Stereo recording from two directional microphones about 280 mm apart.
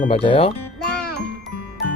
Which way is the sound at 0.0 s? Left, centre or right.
Centre.